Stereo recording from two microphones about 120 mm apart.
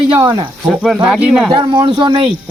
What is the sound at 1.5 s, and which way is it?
Speech, 45° right (ahead or behind).